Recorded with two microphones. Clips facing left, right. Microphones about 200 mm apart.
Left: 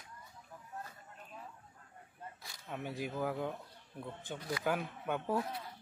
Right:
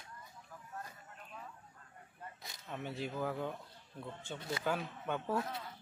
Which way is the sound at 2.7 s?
10° left (ahead or behind).